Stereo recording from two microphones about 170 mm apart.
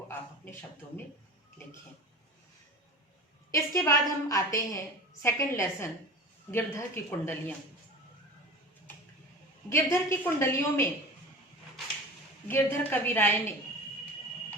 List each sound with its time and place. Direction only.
3.5 s a woman's voice: 20° left (ahead or behind)
9.6 s a woman's voice: 15° left (ahead or behind)
12.5 s a woman's voice: 15° left (ahead or behind)